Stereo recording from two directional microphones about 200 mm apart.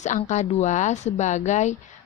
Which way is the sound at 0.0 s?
35° left (ahead or behind).